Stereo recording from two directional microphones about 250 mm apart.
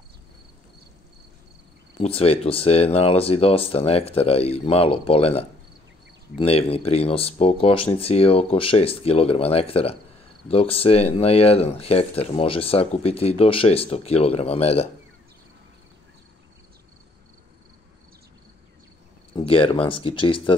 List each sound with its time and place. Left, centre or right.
2.0 s speech: left
19.3 s speech: left